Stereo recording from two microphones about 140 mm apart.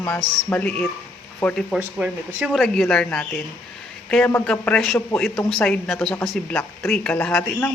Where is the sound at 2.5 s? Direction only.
Centre (ahead or behind).